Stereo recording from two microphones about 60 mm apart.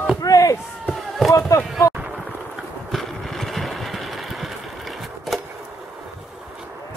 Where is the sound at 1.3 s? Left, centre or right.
Left.